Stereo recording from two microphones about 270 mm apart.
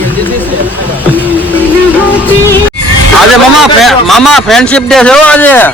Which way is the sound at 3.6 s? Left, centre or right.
Centre.